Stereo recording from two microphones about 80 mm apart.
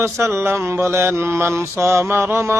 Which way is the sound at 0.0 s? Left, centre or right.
Right.